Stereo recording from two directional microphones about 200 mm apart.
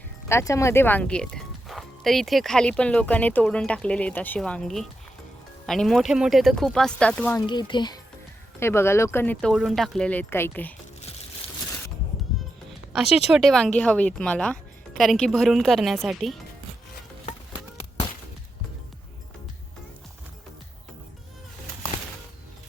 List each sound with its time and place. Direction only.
0.3 s speech: 15° left (ahead or behind)
7.4 s speech: 25° left (ahead or behind)
12.3 s music: centre (ahead or behind)
12.9 s speech: 5° right (ahead or behind)